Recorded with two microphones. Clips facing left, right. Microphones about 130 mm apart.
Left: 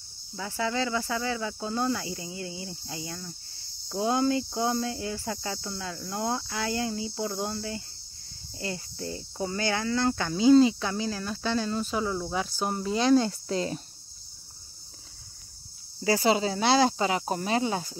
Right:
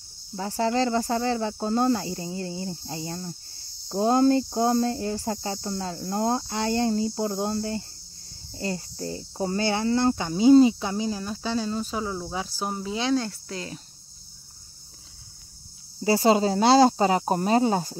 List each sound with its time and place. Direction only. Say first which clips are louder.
0.4 s speech: right 5 dB; 40° right (ahead or behind)
8.5 s speech: right 4 dB; 35° right (ahead or behind); by 11.1 s 15° right (ahead or behind)
11.1 s cricket: right 1 dB; 5° right (ahead or behind)
13.2 s speech: left 5 dB; 25° left (ahead or behind)
16.0 s speech: right 3 dB; 30° right (ahead or behind)
16.3 s speech: right 6 dB; 40° right (ahead or behind)